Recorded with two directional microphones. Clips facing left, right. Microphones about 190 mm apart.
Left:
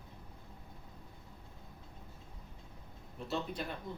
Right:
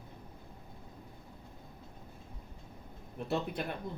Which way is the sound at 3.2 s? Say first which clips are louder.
Right 4 dB; 55° right (ahead or behind).